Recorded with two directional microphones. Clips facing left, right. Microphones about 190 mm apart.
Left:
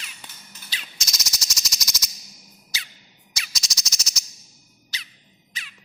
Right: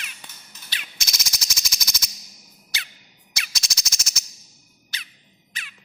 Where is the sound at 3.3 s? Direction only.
60° right (ahead or behind).